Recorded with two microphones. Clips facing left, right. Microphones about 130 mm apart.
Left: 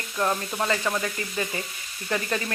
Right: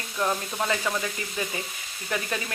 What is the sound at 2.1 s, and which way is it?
Sizzle, 5° right (ahead or behind).